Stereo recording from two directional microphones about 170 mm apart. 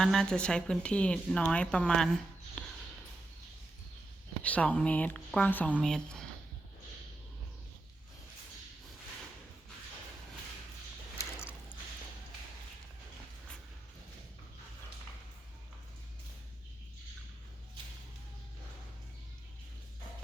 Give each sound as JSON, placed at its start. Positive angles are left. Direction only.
{"t": 0.0, "sound": "speech", "side_deg": 0}
{"t": 2.6, "sound": "a sound", "side_deg": 5}
{"t": 4.4, "sound": "speech", "side_deg": 10}